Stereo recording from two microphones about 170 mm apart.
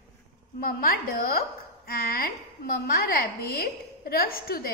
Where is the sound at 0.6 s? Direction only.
60° left (ahead or behind).